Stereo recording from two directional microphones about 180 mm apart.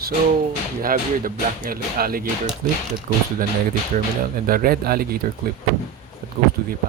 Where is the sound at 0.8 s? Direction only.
50° right (ahead or behind).